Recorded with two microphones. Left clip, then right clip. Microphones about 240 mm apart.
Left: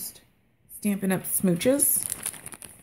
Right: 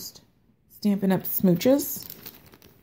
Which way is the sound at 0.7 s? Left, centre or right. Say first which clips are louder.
Right 3 dB; centre.